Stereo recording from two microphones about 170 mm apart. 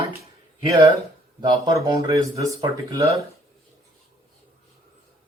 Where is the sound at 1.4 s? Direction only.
25° right (ahead or behind).